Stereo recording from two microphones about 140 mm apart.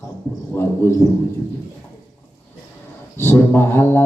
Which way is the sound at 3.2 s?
15° left (ahead or behind).